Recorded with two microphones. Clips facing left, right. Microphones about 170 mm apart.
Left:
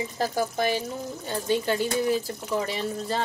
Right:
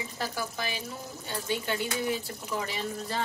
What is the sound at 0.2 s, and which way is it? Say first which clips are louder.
Speech: left 9 dB; 40° left (ahead or behind).